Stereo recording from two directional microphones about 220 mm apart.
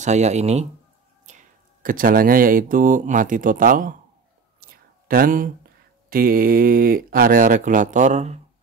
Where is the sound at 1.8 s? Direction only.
40° right (ahead or behind).